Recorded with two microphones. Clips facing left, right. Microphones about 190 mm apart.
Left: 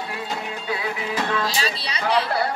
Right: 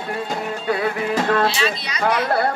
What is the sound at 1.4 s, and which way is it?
Speech, 35° left (ahead or behind).